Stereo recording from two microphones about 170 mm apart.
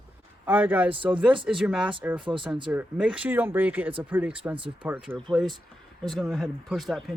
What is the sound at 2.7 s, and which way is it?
Speech, 5° right (ahead or behind).